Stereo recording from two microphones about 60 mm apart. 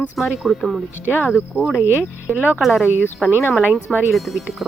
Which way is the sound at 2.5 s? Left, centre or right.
Centre.